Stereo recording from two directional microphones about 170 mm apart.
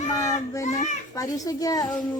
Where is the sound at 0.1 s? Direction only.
20° left (ahead or behind).